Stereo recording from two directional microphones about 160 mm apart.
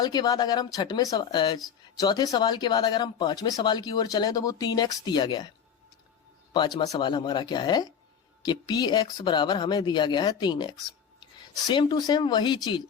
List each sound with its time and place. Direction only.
0.0 s speech: 25° left (ahead or behind)
6.5 s a man's voice: 30° left (ahead or behind)